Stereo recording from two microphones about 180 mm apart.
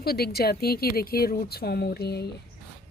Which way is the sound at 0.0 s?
60° left (ahead or behind).